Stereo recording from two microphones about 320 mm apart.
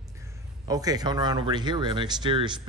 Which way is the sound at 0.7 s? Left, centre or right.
Centre.